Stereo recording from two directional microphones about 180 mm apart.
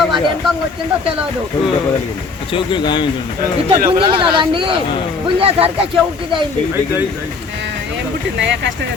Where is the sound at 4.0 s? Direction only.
25° right (ahead or behind).